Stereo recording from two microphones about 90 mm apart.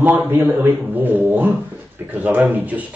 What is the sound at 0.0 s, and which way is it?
A man's voice, 20° right (ahead or behind).